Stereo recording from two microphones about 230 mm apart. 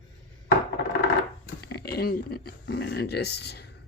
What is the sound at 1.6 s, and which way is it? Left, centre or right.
Speech, left.